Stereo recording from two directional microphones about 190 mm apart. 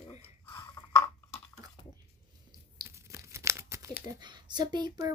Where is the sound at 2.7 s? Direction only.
15° right (ahead or behind).